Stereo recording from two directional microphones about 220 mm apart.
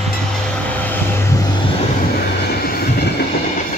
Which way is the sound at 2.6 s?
45° left (ahead or behind).